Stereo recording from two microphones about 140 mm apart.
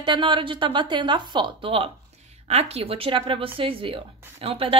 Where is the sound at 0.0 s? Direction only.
35° right (ahead or behind).